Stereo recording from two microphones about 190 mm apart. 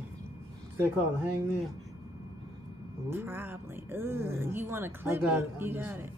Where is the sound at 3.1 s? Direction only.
10° right (ahead or behind).